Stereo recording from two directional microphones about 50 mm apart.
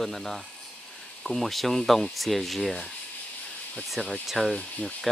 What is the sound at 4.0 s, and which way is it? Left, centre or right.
Speech, centre.